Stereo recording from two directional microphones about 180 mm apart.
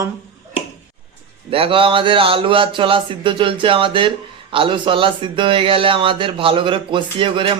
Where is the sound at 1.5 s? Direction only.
30° right (ahead or behind).